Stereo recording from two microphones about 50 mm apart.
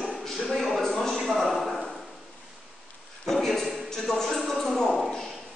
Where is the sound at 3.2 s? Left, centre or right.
Centre.